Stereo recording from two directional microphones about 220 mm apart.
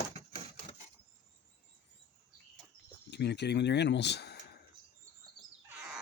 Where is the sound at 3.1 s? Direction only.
50° left (ahead or behind).